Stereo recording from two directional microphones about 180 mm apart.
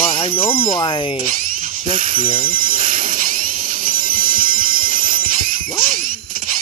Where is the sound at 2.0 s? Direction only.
50° right (ahead or behind).